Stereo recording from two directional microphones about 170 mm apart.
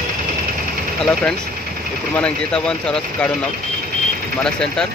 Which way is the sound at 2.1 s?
5° left (ahead or behind).